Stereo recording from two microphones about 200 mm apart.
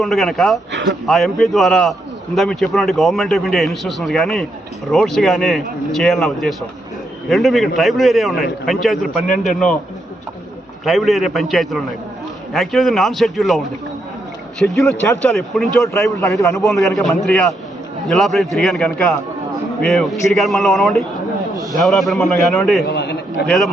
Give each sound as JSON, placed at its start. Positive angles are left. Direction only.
{"t": 0.0, "sound": "a man's voice", "side_deg": 0}
{"t": 0.7, "sound": "speech", "side_deg": -60}
{"t": 1.0, "sound": "a man's voice", "side_deg": 0}
{"t": 10.8, "sound": "a man's voice", "side_deg": 0}
{"t": 14.6, "sound": "a man's voice", "side_deg": 5}
{"t": 15.0, "sound": "a man's voice", "side_deg": 15}
{"t": 15.3, "sound": "a man's voice", "side_deg": 0}
{"t": 15.9, "sound": "a man's voice", "side_deg": 15}
{"t": 16.6, "sound": "a man's voice", "side_deg": 0}
{"t": 22.9, "sound": "a sound", "side_deg": 55}
{"t": 23.5, "sound": "a man's voice", "side_deg": 0}